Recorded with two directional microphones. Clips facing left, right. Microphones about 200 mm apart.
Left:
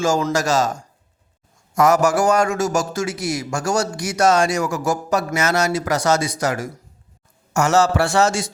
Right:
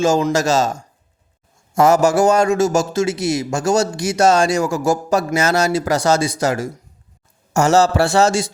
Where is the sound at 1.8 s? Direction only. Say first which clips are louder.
Right 3 dB; 25° right (ahead or behind).